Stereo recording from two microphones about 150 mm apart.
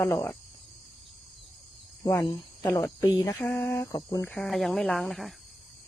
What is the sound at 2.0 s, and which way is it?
Speech, 20° left (ahead or behind).